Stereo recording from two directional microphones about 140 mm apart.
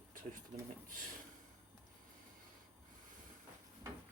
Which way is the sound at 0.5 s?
60° right (ahead or behind).